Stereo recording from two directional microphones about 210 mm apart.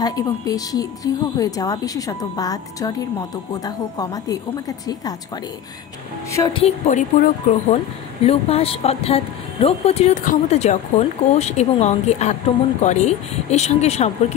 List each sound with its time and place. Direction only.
0.0 s a woman's voice: 15° left (ahead or behind)
6.3 s a woman's voice: 20° left (ahead or behind)